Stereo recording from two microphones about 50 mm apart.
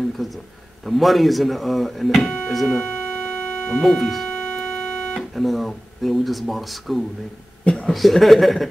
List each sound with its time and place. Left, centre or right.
0.2 s speech: centre
2.8 s music: left
3.8 s speech: centre
4.6 s music: centre
5.3 s speech: centre
7.6 s a sound: centre
7.9 s speech: centre